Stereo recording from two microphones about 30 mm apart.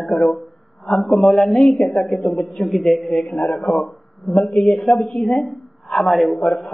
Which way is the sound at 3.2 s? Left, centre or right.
Left.